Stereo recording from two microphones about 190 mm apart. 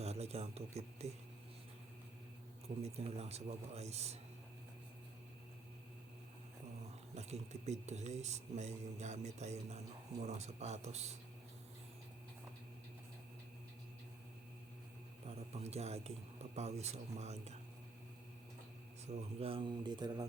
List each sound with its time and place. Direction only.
0.0 s a sound: 35° right (ahead or behind)
2.8 s speech: 35° right (ahead or behind)
7.2 s speech: 35° right (ahead or behind)
15.5 s speech: 35° right (ahead or behind)
19.0 s speech: 30° right (ahead or behind)